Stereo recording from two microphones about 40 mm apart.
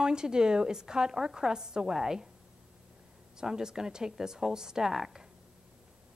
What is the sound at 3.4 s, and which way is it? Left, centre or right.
A woman's voice, centre.